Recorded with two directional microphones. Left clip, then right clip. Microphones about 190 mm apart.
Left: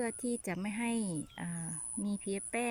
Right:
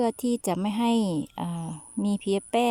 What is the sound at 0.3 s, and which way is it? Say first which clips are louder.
Speech: right 11 dB; 35° right (ahead or behind).